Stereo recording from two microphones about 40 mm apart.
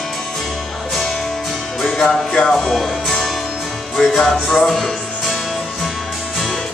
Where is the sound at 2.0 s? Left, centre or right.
Centre.